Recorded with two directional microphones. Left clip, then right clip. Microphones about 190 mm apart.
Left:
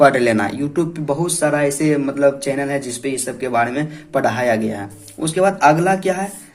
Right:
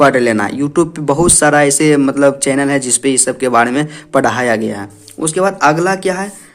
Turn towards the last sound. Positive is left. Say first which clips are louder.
# right 2 dB
turn(degrees=-30)  # may be behind; listen again after turning